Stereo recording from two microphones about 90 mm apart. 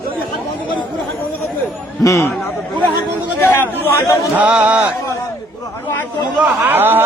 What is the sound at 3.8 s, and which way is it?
Speech, 25° left (ahead or behind).